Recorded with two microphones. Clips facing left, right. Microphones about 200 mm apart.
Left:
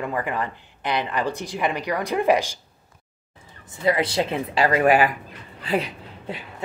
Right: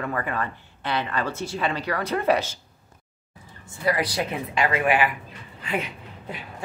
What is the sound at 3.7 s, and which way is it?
Speech, 25° left (ahead or behind).